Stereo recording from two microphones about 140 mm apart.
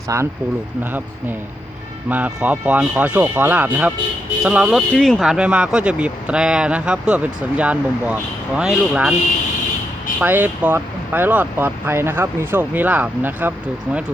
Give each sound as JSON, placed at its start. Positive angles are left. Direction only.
{"t": 0.1, "sound": "speech", "side_deg": -20}
{"t": 2.0, "sound": "speech", "side_deg": -10}
{"t": 4.9, "sound": "speech", "side_deg": 5}
{"t": 10.2, "sound": "speech", "side_deg": -15}